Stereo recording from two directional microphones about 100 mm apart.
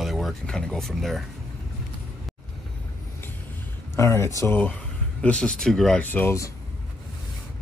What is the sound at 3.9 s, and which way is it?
Speech, 30° left (ahead or behind).